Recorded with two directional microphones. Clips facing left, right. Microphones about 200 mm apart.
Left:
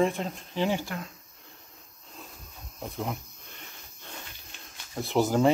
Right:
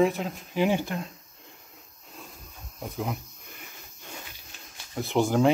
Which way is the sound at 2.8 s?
Centre (ahead or behind).